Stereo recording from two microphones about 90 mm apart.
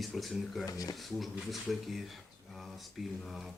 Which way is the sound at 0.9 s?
Centre (ahead or behind).